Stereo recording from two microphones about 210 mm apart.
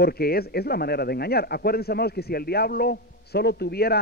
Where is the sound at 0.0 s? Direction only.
45° left (ahead or behind).